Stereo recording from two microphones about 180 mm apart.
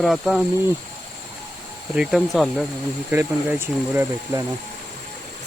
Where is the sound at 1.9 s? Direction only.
5° right (ahead or behind).